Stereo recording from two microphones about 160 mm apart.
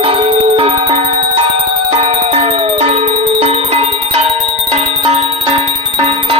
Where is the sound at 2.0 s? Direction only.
40° right (ahead or behind).